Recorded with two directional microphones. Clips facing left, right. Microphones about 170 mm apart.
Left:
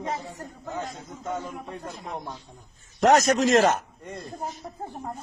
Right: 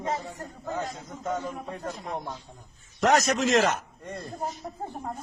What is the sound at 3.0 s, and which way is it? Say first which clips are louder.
Speech: left 4 dB; 40° left (ahead or behind).